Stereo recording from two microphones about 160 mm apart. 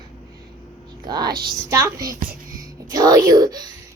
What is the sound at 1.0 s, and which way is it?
Child singing, 25° right (ahead or behind).